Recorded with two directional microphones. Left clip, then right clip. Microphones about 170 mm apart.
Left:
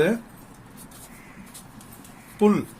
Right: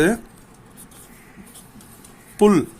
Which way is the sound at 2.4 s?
65° right (ahead or behind).